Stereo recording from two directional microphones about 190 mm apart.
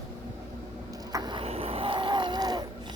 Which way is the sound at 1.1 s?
20° right (ahead or behind).